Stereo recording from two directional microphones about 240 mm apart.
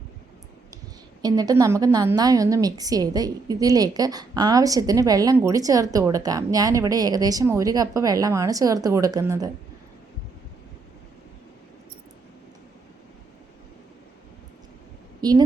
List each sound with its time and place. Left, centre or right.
1.2 s a woman's voice: centre
15.2 s a woman's voice: centre